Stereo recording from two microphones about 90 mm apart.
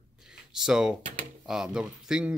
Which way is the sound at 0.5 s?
5° right (ahead or behind).